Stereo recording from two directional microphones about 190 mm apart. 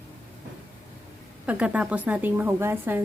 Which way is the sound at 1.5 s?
5° right (ahead or behind).